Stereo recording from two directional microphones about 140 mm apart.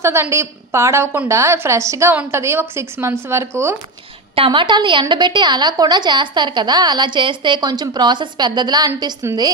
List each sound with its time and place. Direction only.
0.0 s a woman's voice: 20° right (ahead or behind)
4.4 s a woman's voice: 35° right (ahead or behind)